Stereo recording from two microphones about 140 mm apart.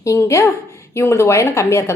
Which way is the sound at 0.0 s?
20° left (ahead or behind).